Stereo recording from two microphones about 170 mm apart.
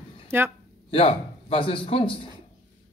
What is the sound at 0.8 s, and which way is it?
A man's voice, 35° left (ahead or behind).